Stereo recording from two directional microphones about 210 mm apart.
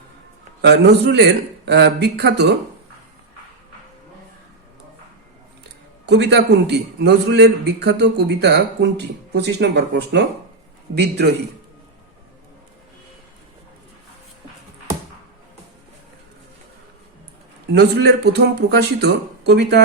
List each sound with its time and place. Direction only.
0.6 s a man's voice: 50° right (ahead or behind)
6.1 s a man's voice: 55° right (ahead or behind)
17.7 s a man's voice: 50° right (ahead or behind)